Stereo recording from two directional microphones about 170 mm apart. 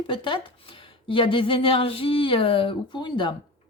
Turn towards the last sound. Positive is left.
turn(degrees=30)  # may be behind; listen again after turning